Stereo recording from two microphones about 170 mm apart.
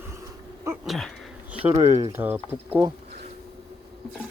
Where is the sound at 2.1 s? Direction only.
10° right (ahead or behind).